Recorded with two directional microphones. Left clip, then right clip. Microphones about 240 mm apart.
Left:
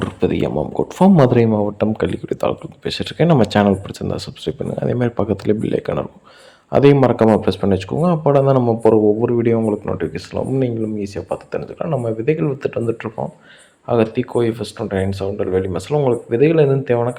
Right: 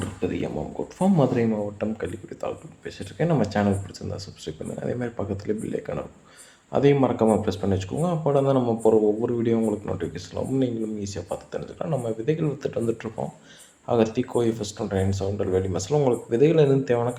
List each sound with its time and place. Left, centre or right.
0.0 s speech: left; by 17.2 s centre